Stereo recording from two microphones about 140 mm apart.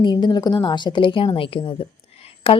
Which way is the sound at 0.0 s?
30° left (ahead or behind).